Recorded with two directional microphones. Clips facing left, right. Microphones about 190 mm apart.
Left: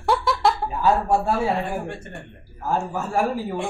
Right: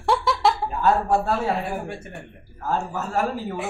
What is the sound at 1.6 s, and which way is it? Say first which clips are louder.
Speech: left 1 dB; 5° right (ahead or behind).